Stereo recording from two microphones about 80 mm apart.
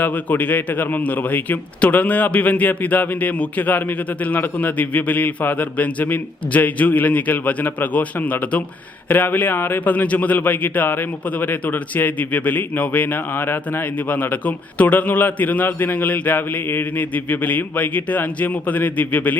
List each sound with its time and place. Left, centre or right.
0.0 s a man's voice: left